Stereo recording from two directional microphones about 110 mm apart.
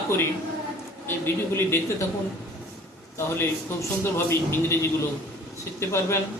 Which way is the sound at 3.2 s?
20° left (ahead or behind).